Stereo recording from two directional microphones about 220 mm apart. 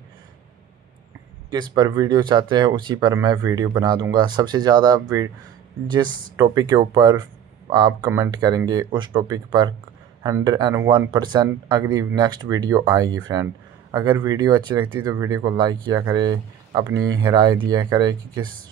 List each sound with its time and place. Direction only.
1.5 s speech: 20° right (ahead or behind)
6.3 s speech: 20° right (ahead or behind)